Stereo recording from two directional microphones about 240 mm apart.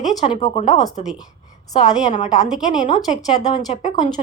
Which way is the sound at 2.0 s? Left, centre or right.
Left.